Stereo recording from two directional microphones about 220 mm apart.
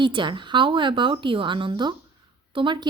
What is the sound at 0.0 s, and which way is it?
A woman's voice, 20° right (ahead or behind).